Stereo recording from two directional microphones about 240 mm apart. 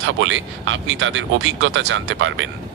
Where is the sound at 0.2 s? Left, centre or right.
Right.